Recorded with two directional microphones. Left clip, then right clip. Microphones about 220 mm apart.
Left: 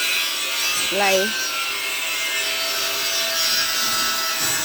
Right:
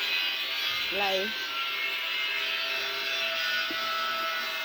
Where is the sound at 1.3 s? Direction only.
30° right (ahead or behind).